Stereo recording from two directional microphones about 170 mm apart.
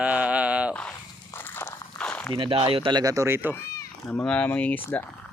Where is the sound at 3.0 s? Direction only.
20° right (ahead or behind).